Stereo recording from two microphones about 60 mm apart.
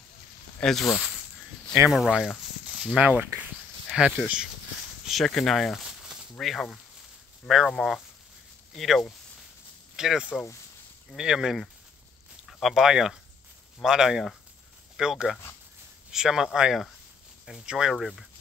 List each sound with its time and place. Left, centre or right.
0.7 s speech: centre
1.9 s speech: centre
2.6 s a sound: centre
3.0 s speech: right
5.2 s speech: centre
12.5 s speech: centre
17.9 s speech: centre